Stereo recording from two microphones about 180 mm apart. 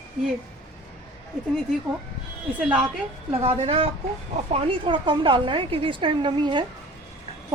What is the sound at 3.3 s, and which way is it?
A woman's voice, 30° right (ahead or behind).